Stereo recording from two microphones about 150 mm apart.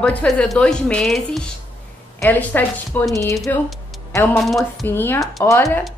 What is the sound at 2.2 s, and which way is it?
A woman's voice, 10° left (ahead or behind).